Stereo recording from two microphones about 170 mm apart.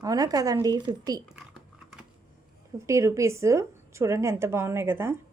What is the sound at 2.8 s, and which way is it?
Speech, 15° right (ahead or behind).